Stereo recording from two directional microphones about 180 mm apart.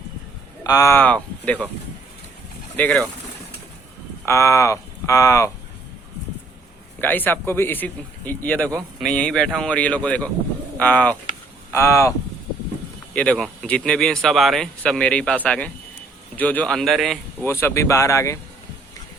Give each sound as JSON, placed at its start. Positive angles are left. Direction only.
{"t": 0.6, "sound": "speech", "side_deg": 20}
{"t": 2.7, "sound": "speech", "side_deg": 10}
{"t": 4.3, "sound": "speech", "side_deg": 15}
{"t": 7.0, "sound": "speech", "side_deg": 10}
{"t": 13.1, "sound": "speech", "side_deg": 5}
{"t": 17.4, "sound": "speech", "side_deg": 15}